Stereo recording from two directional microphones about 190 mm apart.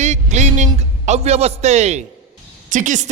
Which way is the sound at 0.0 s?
35° right (ahead or behind).